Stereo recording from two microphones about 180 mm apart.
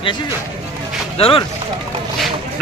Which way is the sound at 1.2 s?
30° left (ahead or behind).